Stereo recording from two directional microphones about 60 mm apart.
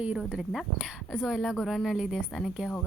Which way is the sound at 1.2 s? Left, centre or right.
Centre.